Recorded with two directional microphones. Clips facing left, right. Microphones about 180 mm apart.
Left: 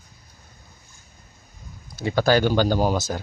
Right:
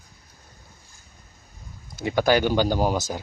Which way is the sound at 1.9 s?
20° right (ahead or behind).